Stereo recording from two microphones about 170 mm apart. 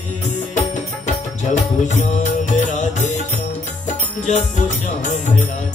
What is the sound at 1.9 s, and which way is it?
Music, 45° left (ahead or behind).